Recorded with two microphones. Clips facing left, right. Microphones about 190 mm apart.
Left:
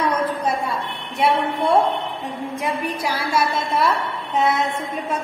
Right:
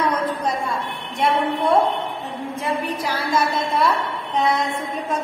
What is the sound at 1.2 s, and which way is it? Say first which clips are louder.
A woman's voice: left 1 dB; 10° left (ahead or behind).